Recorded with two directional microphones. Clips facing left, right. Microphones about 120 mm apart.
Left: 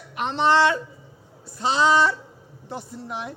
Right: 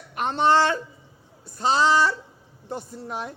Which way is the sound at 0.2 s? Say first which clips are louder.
Even; 45° right (ahead or behind).